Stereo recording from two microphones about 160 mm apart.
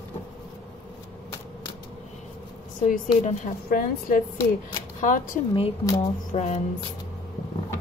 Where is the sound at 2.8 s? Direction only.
55° left (ahead or behind).